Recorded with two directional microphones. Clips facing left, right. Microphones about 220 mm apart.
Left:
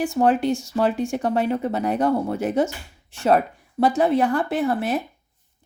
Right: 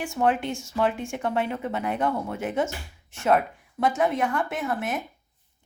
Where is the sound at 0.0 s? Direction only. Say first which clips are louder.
Left 5 dB; 35° left (ahead or behind).